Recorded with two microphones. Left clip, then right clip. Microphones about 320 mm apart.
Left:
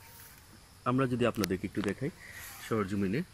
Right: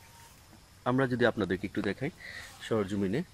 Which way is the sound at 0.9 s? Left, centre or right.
Right.